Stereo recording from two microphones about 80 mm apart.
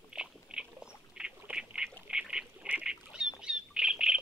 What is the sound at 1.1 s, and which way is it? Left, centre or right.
Duck, centre.